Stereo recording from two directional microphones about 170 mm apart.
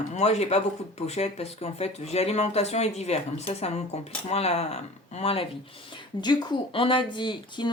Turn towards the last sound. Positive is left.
turn(degrees=25)  # may be behind; listen again after turning